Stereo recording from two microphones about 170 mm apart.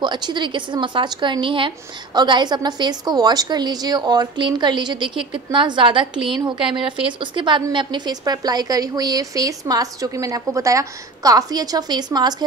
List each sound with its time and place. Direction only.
0.0 s a woman's voice: 25° right (ahead or behind)